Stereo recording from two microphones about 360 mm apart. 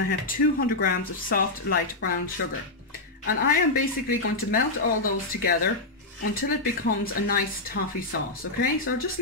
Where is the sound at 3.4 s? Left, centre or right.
Left.